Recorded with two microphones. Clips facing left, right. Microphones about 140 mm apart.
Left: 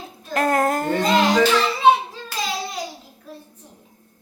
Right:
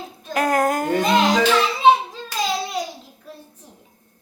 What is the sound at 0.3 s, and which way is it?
Child singing, centre (ahead or behind).